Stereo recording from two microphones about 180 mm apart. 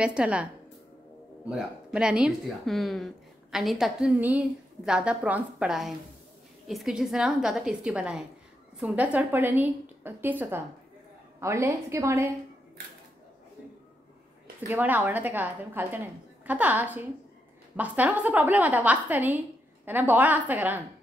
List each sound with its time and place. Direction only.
0.0 s a woman's voice: 5° right (ahead or behind)
14.7 s a woman's voice: 10° right (ahead or behind)